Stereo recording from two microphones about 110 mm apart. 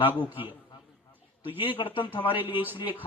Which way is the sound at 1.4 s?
15° right (ahead or behind).